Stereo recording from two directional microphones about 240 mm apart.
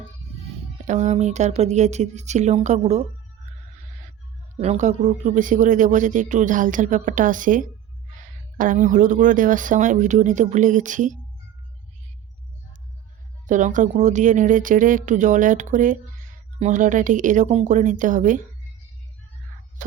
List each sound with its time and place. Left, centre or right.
0.9 s speech: right
13.5 s speech: right